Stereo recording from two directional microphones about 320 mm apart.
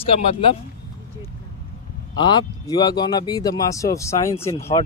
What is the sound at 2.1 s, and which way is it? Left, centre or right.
Speech, centre.